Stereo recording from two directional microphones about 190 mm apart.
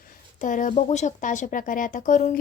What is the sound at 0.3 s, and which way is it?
A woman's voice, 45° left (ahead or behind).